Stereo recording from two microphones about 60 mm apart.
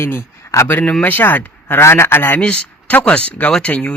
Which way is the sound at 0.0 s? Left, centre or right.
Left.